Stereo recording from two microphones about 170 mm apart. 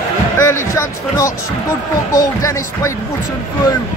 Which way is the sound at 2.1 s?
20° left (ahead or behind).